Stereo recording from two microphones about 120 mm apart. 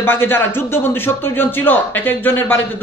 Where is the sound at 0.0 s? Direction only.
20° left (ahead or behind).